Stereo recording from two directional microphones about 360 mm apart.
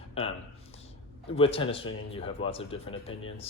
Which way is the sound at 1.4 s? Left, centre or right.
Centre.